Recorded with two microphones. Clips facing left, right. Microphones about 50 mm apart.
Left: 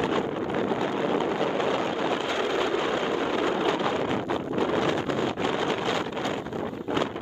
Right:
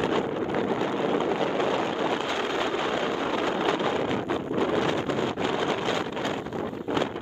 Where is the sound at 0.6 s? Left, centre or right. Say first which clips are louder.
Left 1 dB; left.